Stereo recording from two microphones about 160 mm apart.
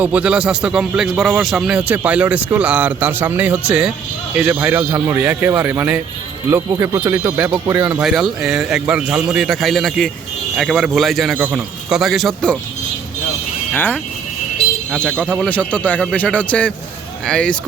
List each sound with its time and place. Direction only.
0.0 s a man's voice: 10° right (ahead or behind)
7.3 s a man's voice: 10° right (ahead or behind)
13.7 s a man's voice: 10° left (ahead or behind)